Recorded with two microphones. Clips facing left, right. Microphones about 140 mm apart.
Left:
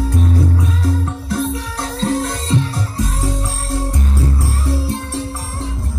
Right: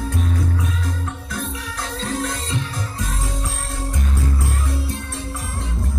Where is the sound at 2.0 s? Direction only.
35° left (ahead or behind).